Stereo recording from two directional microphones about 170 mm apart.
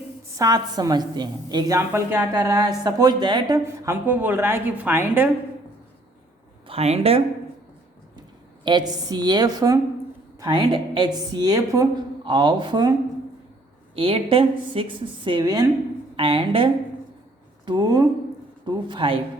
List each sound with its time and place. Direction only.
0.3 s a woman's voice: 25° right (ahead or behind)
6.7 s a woman's voice: 40° right (ahead or behind)
8.6 s a woman's voice: 25° right (ahead or behind)
13.9 s a woman's voice: 35° right (ahead or behind)